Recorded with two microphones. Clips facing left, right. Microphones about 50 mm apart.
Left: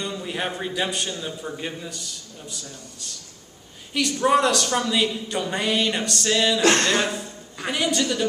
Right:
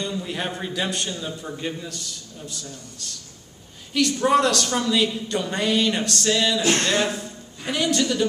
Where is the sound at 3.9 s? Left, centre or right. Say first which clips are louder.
Right 1 dB; centre.